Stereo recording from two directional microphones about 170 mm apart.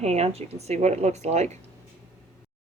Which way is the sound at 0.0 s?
40° right (ahead or behind).